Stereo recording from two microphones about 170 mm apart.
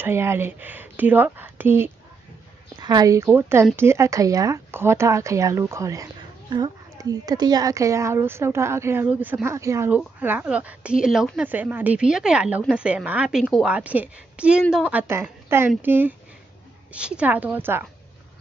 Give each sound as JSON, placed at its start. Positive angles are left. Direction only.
{"t": 0.0, "sound": "a woman's voice", "side_deg": -15}